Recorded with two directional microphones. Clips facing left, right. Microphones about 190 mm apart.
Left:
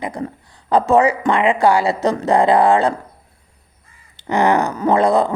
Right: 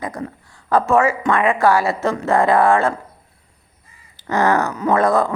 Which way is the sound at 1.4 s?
15° left (ahead or behind).